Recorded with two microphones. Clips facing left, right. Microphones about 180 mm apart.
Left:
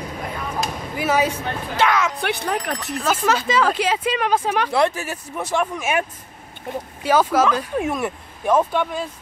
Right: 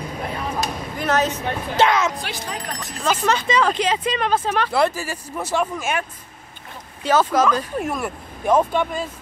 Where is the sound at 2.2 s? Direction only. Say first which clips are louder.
Left 7 dB; 60° left (ahead or behind).